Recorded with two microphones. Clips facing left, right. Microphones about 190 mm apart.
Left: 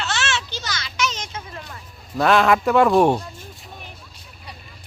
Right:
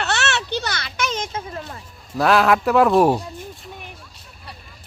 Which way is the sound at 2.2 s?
Centre (ahead or behind).